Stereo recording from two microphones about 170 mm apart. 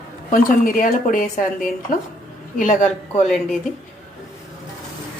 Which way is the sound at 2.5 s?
50° left (ahead or behind).